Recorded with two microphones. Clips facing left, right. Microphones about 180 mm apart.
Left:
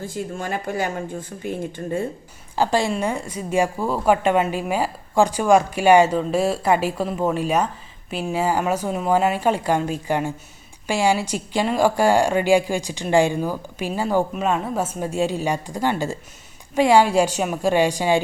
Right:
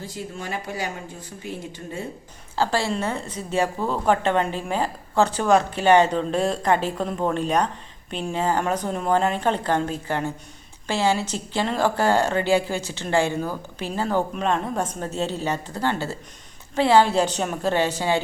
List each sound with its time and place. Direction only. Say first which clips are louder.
0.0 s speech: left 5 dB; 50° left (ahead or behind)
2.6 s a woman's voice: left 3 dB; 15° left (ahead or behind)